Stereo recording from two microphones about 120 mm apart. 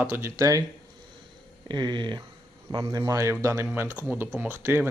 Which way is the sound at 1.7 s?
40° right (ahead or behind).